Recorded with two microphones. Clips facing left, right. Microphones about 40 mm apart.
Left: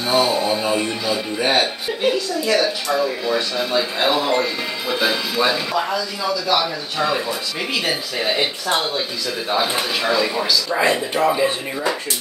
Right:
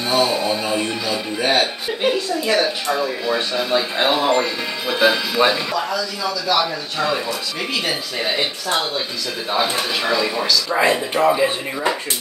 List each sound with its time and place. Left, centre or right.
0.0 s speech: centre
2.1 s a woman's voice: right; by 5.4 s centre
5.8 s speech: centre
6.5 s speech: centre
8.6 s speech: centre
9.5 s speech: centre